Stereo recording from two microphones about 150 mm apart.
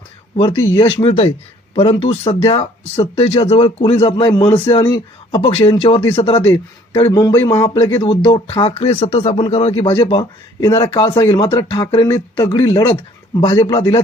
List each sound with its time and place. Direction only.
0.3 s speech: 35° left (ahead or behind)
7.1 s speech: 20° left (ahead or behind)
12.0 s speech: 20° left (ahead or behind)
13.4 s speech: 30° left (ahead or behind)